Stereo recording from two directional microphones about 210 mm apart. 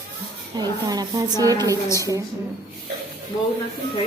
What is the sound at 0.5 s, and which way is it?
A woman's voice, 20° right (ahead or behind).